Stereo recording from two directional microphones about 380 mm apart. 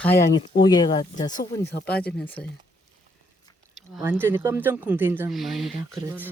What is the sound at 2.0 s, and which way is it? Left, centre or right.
Speech, centre.